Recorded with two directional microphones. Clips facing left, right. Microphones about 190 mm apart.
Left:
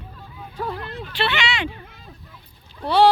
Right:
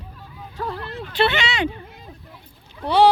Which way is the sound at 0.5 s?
10° left (ahead or behind).